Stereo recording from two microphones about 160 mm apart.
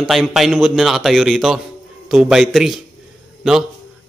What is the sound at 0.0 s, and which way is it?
Speech, centre (ahead or behind).